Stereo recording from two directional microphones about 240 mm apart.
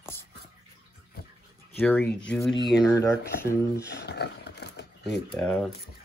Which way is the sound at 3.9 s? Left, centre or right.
Left.